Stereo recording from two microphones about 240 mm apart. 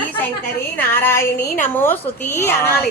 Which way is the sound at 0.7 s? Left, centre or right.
Centre.